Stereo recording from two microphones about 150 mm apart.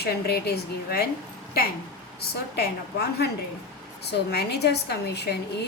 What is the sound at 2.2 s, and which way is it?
A woman's voice, 90° left.